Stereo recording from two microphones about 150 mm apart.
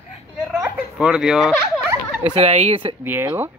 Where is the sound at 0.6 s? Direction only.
5° right (ahead or behind).